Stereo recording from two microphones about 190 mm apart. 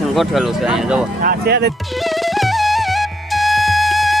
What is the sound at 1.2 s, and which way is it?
Speech, 55° right (ahead or behind).